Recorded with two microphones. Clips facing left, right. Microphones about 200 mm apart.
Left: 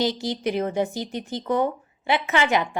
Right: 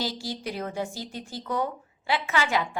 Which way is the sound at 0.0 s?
20° left (ahead or behind).